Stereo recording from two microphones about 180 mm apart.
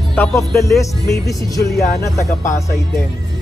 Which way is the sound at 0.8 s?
15° left (ahead or behind).